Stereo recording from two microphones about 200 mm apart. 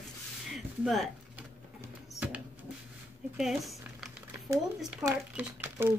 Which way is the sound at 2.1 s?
5° right (ahead or behind).